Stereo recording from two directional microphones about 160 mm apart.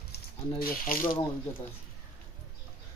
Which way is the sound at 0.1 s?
65° left (ahead or behind).